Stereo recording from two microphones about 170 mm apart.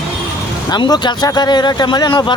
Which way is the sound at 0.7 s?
25° left (ahead or behind).